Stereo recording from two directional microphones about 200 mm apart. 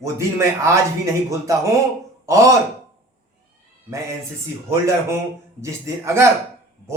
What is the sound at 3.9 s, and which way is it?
Speech, 15° right (ahead or behind).